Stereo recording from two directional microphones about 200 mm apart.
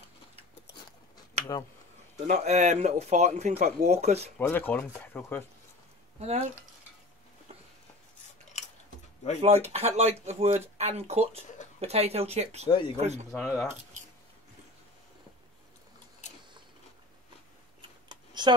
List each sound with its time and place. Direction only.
2.1 s a man's voice: 45° right (ahead or behind)
2.4 s speech: 35° right (ahead or behind)
4.4 s speech: 10° left (ahead or behind)
6.1 s speech: 30° right (ahead or behind)
8.5 s a sound: 35° left (ahead or behind)
9.4 s speech: 30° right (ahead or behind)
12.6 s speech: 25° left (ahead or behind)
12.9 s speech: 35° right (ahead or behind)
13.3 s speech: 5° left (ahead or behind)
18.0 s computer keyboard: 20° right (ahead or behind)